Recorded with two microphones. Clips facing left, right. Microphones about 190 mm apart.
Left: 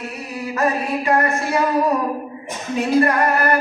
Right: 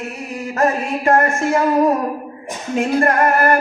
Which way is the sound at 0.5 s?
45° right (ahead or behind).